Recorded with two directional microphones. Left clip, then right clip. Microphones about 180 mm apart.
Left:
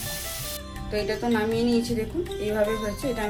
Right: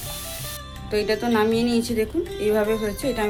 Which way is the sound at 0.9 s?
30° right (ahead or behind).